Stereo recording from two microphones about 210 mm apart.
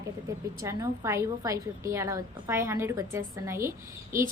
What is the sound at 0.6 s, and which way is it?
A woman's voice, 15° right (ahead or behind).